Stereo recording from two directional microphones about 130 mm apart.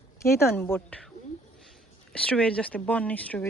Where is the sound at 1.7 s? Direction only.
5° left (ahead or behind).